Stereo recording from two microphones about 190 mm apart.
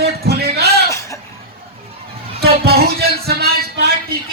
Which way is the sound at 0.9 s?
15° left (ahead or behind).